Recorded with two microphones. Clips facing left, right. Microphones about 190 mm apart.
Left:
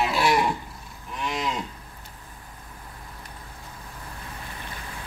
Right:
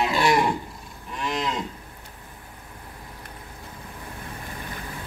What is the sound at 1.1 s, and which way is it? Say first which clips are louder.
Cattle: right 1 dB; 5° left (ahead or behind).